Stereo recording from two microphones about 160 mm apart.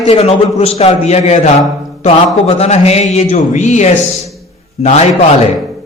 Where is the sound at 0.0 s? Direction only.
40° left (ahead or behind).